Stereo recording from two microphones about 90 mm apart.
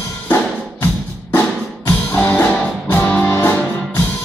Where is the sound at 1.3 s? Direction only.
20° left (ahead or behind).